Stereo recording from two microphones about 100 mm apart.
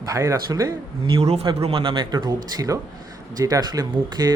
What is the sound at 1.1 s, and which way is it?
Speech, 85° right.